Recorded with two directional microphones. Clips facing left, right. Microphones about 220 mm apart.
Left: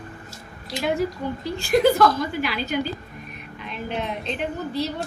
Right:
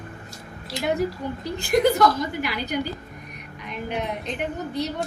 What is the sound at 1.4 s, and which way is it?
A woman's voice, 20° right (ahead or behind).